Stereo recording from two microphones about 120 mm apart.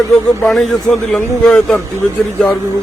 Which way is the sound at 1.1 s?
5° left (ahead or behind).